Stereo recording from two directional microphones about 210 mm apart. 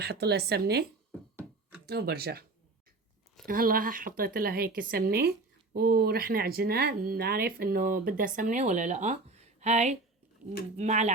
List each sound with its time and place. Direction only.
0.0 s speech: 50° right (ahead or behind)
1.9 s speech: 50° right (ahead or behind)
3.4 s speech: 45° right (ahead or behind)